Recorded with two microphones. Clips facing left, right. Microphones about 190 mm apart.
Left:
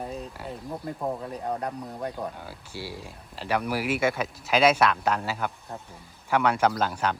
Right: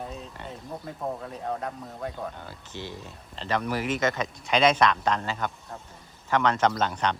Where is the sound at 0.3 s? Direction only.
Centre (ahead or behind).